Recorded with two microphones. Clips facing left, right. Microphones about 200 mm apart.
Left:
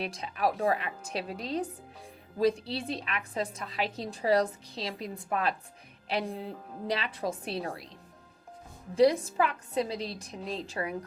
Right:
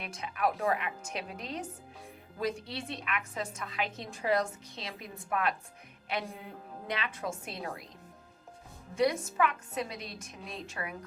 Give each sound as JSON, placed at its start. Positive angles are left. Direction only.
{"t": 0.0, "sound": "a woman's voice", "side_deg": 35}
{"t": 9.2, "sound": "a woman's voice", "side_deg": 35}